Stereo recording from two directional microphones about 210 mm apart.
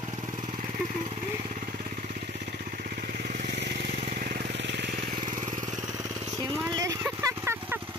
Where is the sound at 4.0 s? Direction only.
40° right (ahead or behind); by 5.2 s 55° right (ahead or behind).